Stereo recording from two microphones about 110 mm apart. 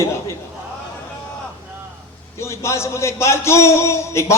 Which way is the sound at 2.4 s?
25° left (ahead or behind).